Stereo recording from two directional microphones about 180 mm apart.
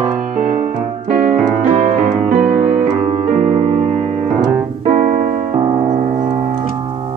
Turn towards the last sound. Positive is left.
turn(degrees=-40)  # may be behind; listen again after turning